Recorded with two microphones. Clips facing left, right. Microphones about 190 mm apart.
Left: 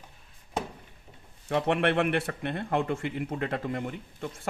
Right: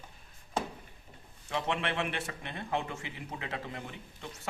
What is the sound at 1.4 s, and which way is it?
Speech, 60° left (ahead or behind).